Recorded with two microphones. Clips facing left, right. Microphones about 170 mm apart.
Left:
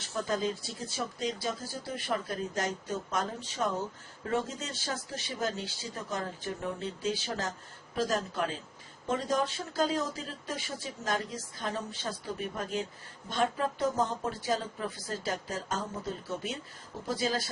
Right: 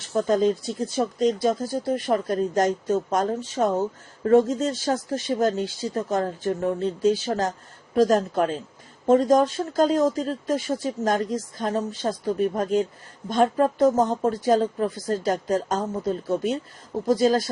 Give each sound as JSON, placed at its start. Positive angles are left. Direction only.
{"t": 0.1, "sound": "a woman's voice", "side_deg": -45}